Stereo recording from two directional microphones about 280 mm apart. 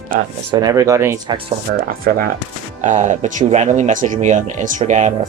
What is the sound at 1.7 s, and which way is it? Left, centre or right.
Speech, right.